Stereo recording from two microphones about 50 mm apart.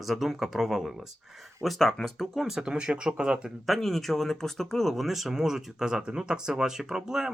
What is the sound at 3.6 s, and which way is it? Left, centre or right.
Speech, centre.